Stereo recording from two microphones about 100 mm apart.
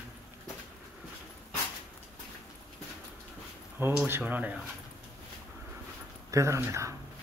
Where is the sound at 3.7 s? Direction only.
20° right (ahead or behind).